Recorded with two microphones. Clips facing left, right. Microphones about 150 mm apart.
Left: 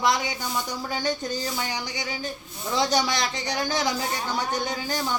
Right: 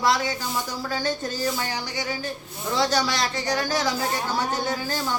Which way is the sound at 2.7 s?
15° left (ahead or behind).